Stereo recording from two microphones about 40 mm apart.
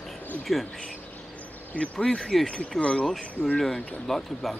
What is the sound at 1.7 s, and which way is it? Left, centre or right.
Speech, left.